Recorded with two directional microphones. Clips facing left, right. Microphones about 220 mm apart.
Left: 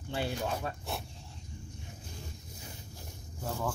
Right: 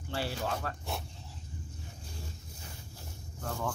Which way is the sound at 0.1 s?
15° left (ahead or behind).